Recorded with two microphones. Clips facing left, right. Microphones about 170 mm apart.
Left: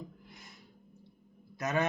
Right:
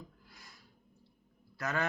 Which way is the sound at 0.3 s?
20° left (ahead or behind).